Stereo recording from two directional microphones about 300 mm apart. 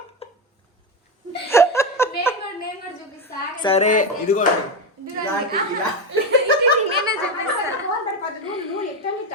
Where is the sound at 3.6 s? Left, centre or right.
Centre.